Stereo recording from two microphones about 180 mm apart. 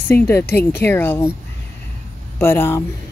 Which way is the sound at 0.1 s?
10° left (ahead or behind).